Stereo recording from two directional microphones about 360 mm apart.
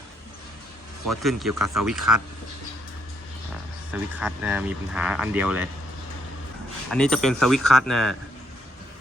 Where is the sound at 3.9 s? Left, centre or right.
Centre.